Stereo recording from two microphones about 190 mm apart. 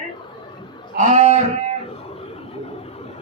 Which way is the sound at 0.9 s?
35° right (ahead or behind).